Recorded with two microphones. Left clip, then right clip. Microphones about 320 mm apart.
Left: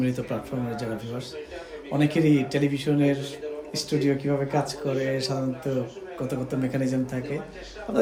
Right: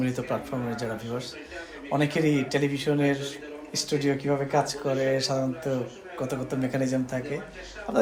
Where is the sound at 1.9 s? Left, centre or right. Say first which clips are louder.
Left 2 dB; centre.